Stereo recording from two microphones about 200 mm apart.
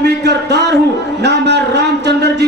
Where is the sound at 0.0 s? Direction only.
55° right (ahead or behind).